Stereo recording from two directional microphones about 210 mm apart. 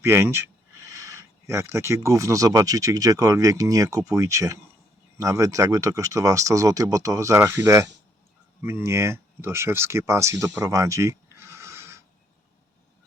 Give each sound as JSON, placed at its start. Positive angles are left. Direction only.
{"t": 0.0, "sound": "speech", "side_deg": -10}